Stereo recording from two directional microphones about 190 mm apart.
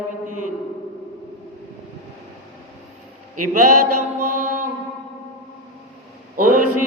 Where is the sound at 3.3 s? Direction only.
45° right (ahead or behind).